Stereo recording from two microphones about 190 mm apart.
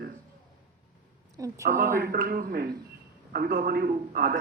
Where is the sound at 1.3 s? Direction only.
15° right (ahead or behind).